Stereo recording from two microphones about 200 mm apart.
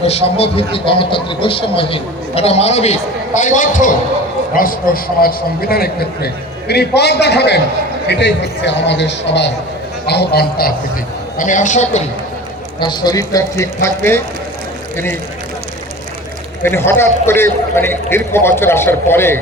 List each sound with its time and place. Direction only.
0.0 s a man's voice: 30° left (ahead or behind); by 10.7 s 55° left (ahead or behind)
11.3 s a man's voice: 40° left (ahead or behind)
12.8 s speech: 20° left (ahead or behind)
16.6 s speech: 10° left (ahead or behind)